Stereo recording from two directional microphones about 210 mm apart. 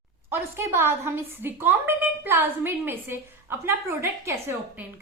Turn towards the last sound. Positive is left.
turn(degrees=-10)  # may be behind; listen again after turning